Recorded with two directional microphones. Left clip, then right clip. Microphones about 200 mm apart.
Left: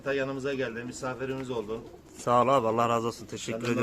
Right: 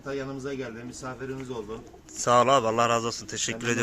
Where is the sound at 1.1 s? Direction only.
5° left (ahead or behind).